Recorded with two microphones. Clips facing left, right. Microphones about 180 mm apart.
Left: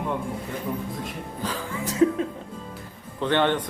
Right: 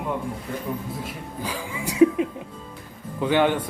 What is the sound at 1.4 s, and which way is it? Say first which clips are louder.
A man's voice: even; 10° right (ahead or behind).